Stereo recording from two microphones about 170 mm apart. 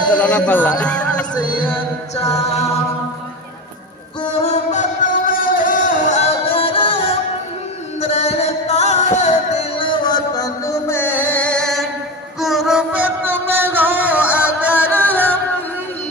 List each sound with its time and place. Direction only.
0.2 s speech: 10° left (ahead or behind)
2.5 s a capella: 40° left (ahead or behind)
4.2 s music: 40° left (ahead or behind); by 15.0 s 10° right (ahead or behind)
15.0 s music: 10° left (ahead or behind)